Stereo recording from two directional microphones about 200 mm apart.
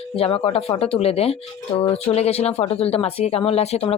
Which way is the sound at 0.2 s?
30° left (ahead or behind).